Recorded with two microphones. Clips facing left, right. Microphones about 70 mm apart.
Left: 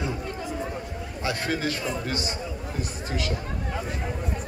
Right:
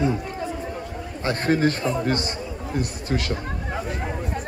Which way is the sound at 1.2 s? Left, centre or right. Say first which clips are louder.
Right 7 dB; right.